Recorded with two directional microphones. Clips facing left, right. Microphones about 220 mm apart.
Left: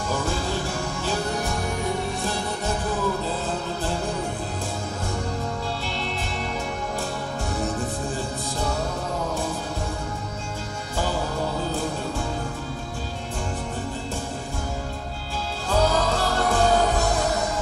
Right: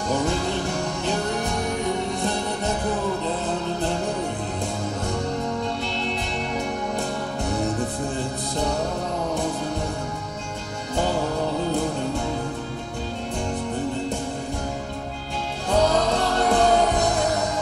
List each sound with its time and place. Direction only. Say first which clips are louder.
16.3 s music: right 3 dB; 20° right (ahead or behind)